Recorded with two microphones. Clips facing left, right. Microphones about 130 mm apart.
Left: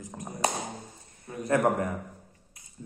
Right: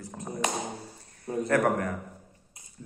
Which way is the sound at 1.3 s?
35° right (ahead or behind).